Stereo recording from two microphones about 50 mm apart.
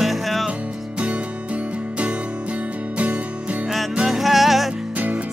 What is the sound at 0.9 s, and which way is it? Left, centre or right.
Music, right.